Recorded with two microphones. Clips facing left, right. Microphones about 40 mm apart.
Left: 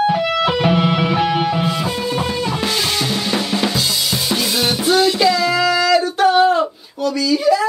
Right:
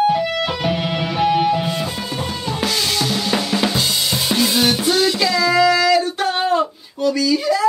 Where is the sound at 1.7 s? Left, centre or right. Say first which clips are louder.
Left 3 dB; left.